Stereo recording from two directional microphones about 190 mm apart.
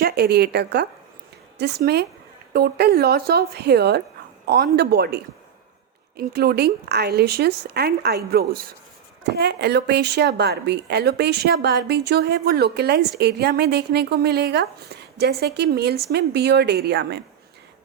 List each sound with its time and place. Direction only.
0.0 s a woman's voice: 55° right (ahead or behind)